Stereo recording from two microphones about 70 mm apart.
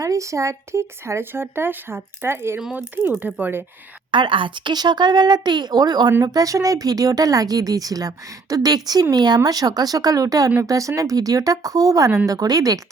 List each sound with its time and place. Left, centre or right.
0.0 s speech: right
2.7 s speech: right
4.7 s speech: right
6.2 s speech: right